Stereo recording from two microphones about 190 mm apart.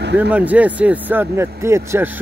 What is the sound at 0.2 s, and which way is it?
Speech, 10° right (ahead or behind).